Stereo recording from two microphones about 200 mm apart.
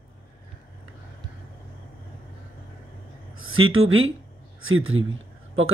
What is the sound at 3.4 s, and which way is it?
Speech, 90° right.